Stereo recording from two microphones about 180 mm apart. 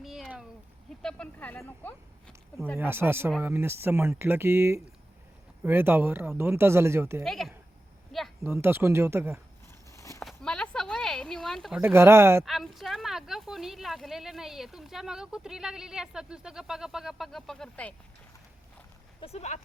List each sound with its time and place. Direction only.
0.0 s a sound: centre (ahead or behind)
1.0 s speech: 5° left (ahead or behind)
2.7 s speech: 15° right (ahead or behind)
7.3 s speech: centre (ahead or behind)
8.1 s a sound: centre (ahead or behind)
8.4 s speech: 15° right (ahead or behind)
9.9 s horse: 15° left (ahead or behind)
10.2 s a sound: 5° left (ahead or behind)
11.8 s speech: 15° right (ahead or behind)
12.5 s speech: centre (ahead or behind)
19.2 s speech: 35° left (ahead or behind)